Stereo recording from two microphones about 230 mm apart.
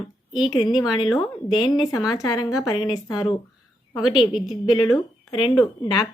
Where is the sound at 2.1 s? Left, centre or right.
Centre.